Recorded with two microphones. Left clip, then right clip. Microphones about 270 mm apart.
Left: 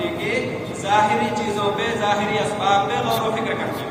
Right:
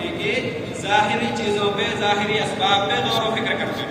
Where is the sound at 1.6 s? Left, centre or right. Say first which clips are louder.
Left 1 dB; centre.